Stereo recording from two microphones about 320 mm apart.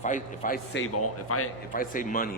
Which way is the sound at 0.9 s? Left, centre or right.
Left.